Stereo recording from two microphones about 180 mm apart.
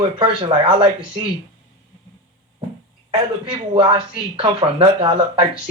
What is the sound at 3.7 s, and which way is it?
Speech, 30° right (ahead or behind).